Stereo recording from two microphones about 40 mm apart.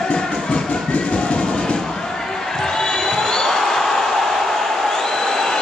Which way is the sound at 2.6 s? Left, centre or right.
Centre.